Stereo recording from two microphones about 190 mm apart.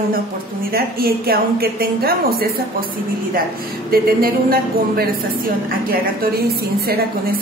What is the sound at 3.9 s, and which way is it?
A woman's voice, 50° right (ahead or behind).